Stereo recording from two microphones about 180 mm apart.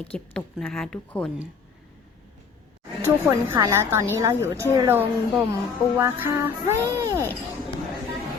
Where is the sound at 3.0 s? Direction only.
15° right (ahead or behind).